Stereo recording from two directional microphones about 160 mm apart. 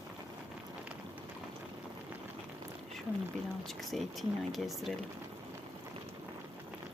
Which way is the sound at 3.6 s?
Centre (ahead or behind).